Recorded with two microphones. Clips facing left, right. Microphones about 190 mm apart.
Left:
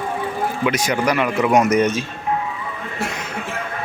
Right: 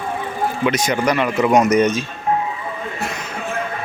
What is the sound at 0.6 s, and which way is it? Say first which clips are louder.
Speech: right 1 dB; 10° left (ahead or behind).